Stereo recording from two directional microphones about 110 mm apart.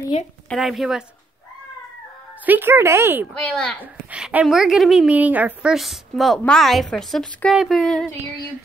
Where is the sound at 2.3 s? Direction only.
15° right (ahead or behind).